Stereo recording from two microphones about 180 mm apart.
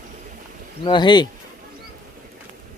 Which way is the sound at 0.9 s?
25° left (ahead or behind).